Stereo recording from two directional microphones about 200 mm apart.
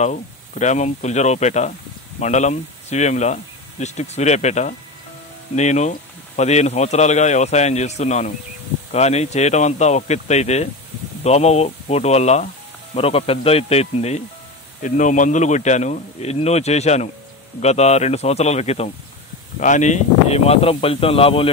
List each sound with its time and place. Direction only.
0.0 s speech: 35° left (ahead or behind)